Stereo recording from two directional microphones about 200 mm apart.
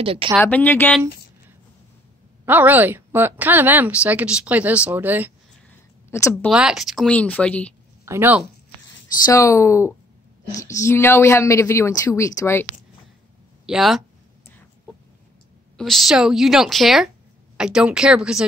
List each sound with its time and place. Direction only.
0.0 s speech: 25° right (ahead or behind)
0.4 s a woman's voice: 10° left (ahead or behind)
2.4 s a woman's voice: 10° right (ahead or behind)
6.0 s a woman's voice: 15° left (ahead or behind)
6.5 s a woman's voice: 5° right (ahead or behind)
8.0 s speech: 10° right (ahead or behind)
9.2 s a woman's voice: 15° left (ahead or behind)
13.7 s a woman's voice: centre (ahead or behind)
15.8 s a woman's voice: centre (ahead or behind)